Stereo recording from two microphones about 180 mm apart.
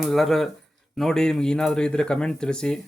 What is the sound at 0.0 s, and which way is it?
Speech, centre (ahead or behind).